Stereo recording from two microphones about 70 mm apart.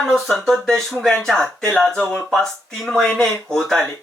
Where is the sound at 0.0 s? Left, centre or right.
Centre.